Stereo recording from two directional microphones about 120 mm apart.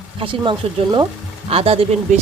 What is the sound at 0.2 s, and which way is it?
Speech, 45° right (ahead or behind).